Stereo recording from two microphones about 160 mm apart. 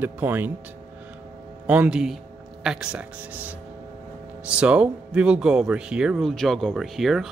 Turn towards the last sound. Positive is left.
turn(degrees=0)  # may be behind; listen again after turning